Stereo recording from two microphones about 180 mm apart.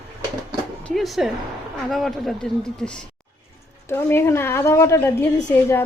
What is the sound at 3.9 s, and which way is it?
A woman's voice, 15° left (ahead or behind).